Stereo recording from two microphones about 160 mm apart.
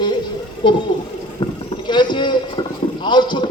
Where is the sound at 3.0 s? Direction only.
30° left (ahead or behind).